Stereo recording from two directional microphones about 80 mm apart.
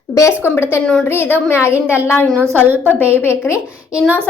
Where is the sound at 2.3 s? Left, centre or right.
Right.